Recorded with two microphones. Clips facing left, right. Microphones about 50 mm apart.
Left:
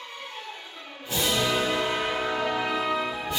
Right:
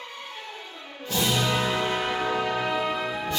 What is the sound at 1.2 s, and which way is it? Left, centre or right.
Music, centre.